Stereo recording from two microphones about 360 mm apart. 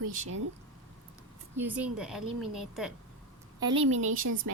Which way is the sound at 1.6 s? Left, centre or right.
Centre.